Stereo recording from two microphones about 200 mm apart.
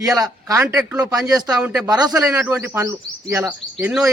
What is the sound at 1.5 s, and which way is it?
Speech, 5° right (ahead or behind).